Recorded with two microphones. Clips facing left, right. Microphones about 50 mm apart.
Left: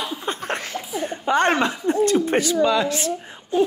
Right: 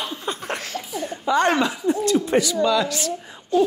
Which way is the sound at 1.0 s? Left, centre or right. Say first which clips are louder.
Left 1 dB; left.